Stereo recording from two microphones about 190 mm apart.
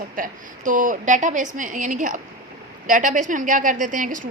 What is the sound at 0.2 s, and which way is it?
A woman's voice, 45° right (ahead or behind).